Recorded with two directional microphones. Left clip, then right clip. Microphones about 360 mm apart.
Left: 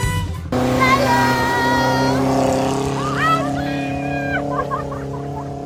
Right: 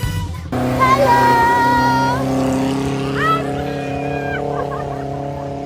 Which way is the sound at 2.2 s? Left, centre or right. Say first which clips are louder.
Left 2 dB; left.